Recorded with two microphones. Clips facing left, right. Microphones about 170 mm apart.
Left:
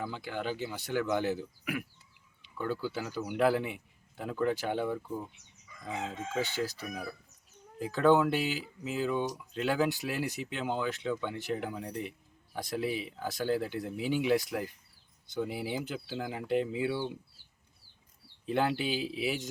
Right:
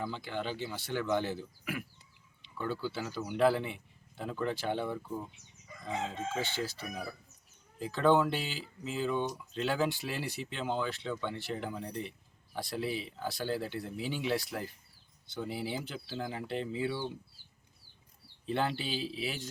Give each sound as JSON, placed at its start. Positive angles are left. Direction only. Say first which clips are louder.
{"t": 0.0, "sound": "speech", "louder": "left 1 dB", "side_deg": 10}
{"t": 2.8, "sound": "speech", "louder": "left 1 dB", "side_deg": 10}
{"t": 7.8, "sound": "speech", "louder": "left 2 dB", "side_deg": 10}
{"t": 18.4, "sound": "speech", "louder": "left 3 dB", "side_deg": 10}